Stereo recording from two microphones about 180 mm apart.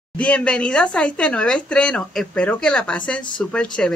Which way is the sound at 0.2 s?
5° left (ahead or behind).